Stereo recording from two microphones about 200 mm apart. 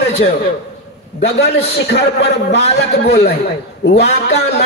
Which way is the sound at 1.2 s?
55° left (ahead or behind).